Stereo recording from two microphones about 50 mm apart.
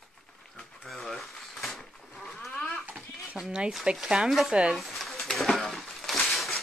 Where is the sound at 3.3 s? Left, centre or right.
Centre.